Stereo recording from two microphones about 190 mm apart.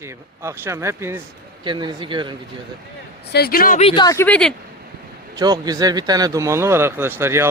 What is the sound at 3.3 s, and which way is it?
Speech, 55° left (ahead or behind).